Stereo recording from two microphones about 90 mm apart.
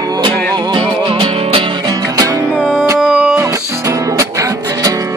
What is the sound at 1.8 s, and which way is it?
Music, 45° right (ahead or behind).